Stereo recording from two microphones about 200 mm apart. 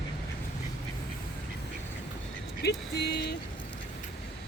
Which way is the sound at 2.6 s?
55° left (ahead or behind).